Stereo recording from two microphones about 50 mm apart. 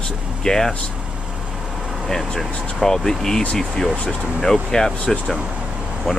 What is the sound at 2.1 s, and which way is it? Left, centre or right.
Speech, centre.